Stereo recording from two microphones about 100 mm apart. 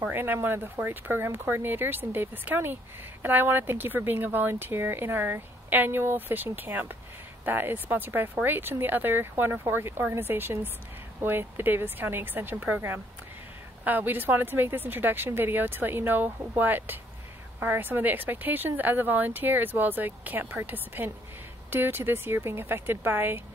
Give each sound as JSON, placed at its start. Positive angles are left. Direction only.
{"t": 0.0, "sound": "speech", "side_deg": -20}